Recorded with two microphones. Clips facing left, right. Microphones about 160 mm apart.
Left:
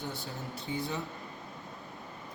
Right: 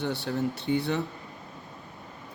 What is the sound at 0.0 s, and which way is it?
A man's voice, 75° right (ahead or behind).